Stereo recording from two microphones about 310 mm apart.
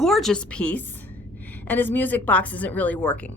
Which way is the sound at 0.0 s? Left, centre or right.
Centre.